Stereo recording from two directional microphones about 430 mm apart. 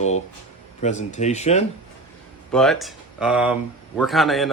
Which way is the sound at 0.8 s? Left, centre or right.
Centre.